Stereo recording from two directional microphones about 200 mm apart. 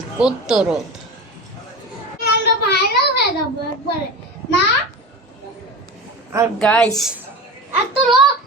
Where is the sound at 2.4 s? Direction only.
55° left (ahead or behind).